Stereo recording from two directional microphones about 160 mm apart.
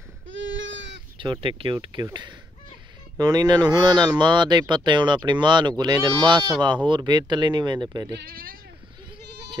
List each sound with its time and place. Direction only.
1.1 s speech: 30° right (ahead or behind)
8.1 s speech: 80° right